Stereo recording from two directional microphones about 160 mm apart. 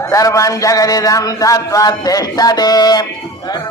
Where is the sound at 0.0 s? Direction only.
20° left (ahead or behind).